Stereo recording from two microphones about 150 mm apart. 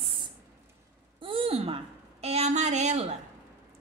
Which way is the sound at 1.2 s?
40° right (ahead or behind).